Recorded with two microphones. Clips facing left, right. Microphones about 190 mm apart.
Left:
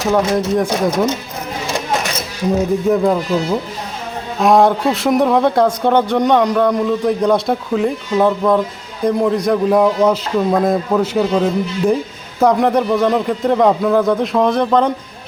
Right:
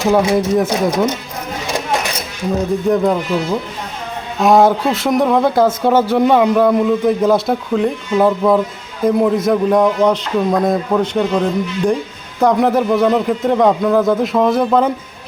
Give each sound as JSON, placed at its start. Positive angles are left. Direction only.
{"t": 0.1, "sound": "speech", "side_deg": -10}
{"t": 2.9, "sound": "speech", "side_deg": 0}